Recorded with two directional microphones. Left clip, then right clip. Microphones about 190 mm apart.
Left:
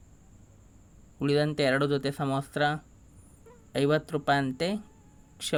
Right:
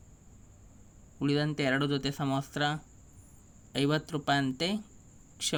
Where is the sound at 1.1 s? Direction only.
20° left (ahead or behind).